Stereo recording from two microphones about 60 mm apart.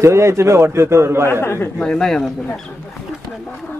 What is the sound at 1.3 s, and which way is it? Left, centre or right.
Speech, left.